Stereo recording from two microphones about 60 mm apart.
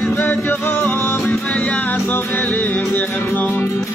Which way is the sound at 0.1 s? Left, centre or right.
Left.